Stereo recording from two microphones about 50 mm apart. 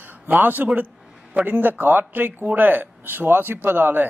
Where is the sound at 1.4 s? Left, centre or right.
Right.